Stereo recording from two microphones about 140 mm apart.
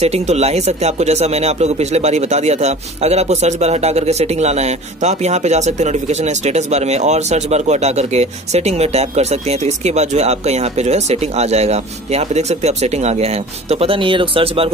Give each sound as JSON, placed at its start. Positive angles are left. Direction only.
{"t": 0.0, "sound": "speech", "side_deg": -50}